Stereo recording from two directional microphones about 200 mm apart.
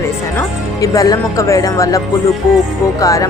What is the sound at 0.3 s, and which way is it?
A woman's voice, 15° left (ahead or behind).